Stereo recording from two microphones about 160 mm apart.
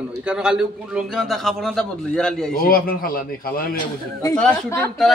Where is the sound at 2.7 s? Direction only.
65° left (ahead or behind).